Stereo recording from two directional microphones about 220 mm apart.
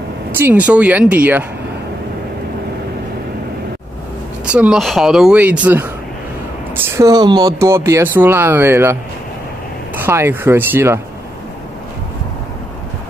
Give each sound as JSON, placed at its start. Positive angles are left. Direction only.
{"t": 0.4, "sound": "speech", "side_deg": -5}
{"t": 4.5, "sound": "speech", "side_deg": -5}
{"t": 7.0, "sound": "speech", "side_deg": -20}
{"t": 10.0, "sound": "speech", "side_deg": -10}